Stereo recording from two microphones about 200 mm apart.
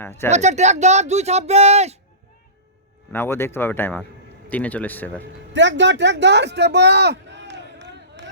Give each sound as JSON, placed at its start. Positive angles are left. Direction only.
{"t": 0.0, "sound": "speech", "side_deg": 10}
{"t": 0.3, "sound": "speech", "side_deg": -35}
{"t": 3.1, "sound": "speech", "side_deg": 10}
{"t": 5.5, "sound": "a man's voice", "side_deg": -65}